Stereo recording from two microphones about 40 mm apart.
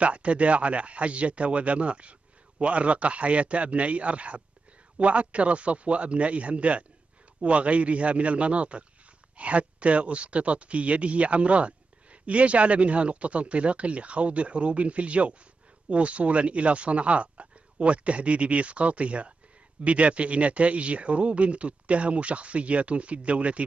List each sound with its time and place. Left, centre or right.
0.0 s speech: right